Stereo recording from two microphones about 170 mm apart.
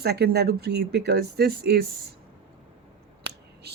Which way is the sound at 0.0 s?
75° right (ahead or behind).